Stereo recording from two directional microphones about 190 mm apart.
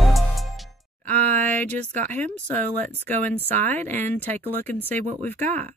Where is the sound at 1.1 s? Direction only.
10° left (ahead or behind).